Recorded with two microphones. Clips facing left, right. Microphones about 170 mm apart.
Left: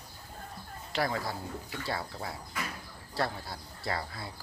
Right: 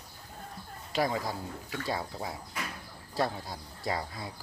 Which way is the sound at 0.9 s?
15° right (ahead or behind).